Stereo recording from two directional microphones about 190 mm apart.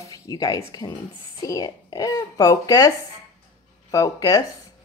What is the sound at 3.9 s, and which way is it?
Speech, 20° left (ahead or behind).